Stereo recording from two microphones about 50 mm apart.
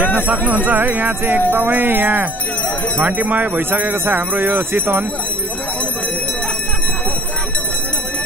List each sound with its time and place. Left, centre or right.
0.3 s jingle bell: right